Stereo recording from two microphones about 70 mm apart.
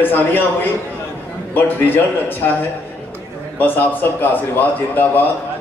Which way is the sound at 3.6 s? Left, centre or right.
Left.